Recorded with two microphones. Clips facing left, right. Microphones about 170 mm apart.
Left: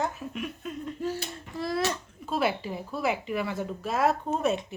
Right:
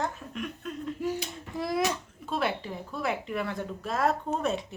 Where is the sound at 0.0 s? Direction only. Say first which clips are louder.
Left 2 dB; 5° left (ahead or behind).